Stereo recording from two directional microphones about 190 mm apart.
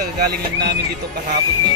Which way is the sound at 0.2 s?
60° right (ahead or behind).